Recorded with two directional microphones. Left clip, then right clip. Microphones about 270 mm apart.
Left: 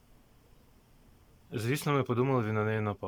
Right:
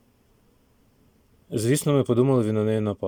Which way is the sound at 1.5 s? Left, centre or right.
Right.